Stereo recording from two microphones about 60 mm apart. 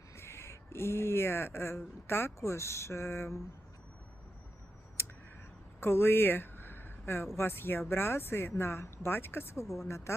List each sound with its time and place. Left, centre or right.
0.2 s speech: left
5.8 s a sound: left
7.3 s speech: left